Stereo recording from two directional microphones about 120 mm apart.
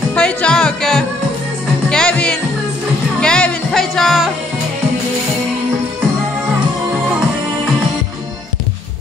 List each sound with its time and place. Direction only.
0.1 s music: 10° left (ahead or behind)